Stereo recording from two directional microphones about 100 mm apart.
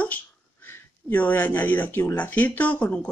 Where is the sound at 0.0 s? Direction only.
20° left (ahead or behind).